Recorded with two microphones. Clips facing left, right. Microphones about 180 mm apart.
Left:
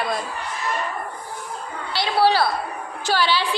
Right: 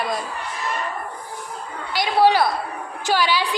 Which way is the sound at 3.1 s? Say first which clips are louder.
Right 1 dB; 15° right (ahead or behind).